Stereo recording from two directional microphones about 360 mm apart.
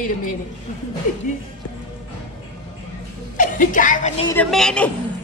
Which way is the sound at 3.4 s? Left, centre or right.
Left.